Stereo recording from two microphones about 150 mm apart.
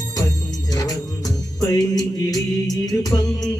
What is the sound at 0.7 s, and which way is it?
Music, 25° left (ahead or behind).